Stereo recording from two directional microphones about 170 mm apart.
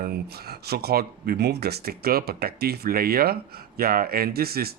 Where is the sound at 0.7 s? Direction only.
70° right (ahead or behind).